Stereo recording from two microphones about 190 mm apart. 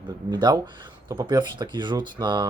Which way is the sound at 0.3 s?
20° right (ahead or behind).